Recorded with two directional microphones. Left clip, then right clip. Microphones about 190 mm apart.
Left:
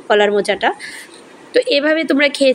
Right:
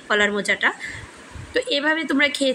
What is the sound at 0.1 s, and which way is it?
A woman's voice, 15° left (ahead or behind).